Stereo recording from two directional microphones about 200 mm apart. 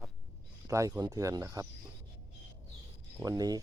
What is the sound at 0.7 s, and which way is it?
Speech, 15° right (ahead or behind).